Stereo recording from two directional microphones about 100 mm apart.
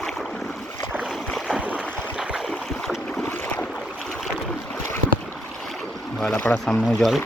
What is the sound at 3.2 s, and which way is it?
Boat, 15° left (ahead or behind).